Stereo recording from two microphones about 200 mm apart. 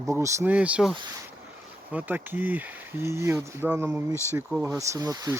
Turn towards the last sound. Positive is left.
turn(degrees=-15)  # may be behind; listen again after turning